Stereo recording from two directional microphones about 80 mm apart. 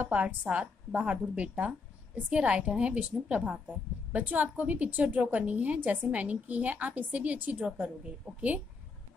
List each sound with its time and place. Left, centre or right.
0.0 s a woman's voice: centre